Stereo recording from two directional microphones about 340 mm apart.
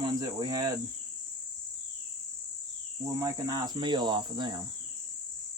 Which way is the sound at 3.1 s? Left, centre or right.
Centre.